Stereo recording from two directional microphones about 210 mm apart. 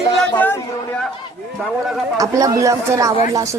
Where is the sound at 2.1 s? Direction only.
15° right (ahead or behind).